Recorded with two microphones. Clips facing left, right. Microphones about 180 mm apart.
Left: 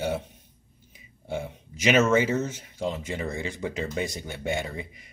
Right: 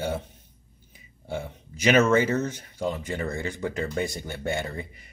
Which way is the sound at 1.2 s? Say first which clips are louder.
Left 1 dB; centre (ahead or behind).